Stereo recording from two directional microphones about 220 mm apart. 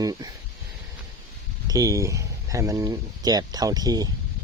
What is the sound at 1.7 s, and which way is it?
Speech, 15° right (ahead or behind).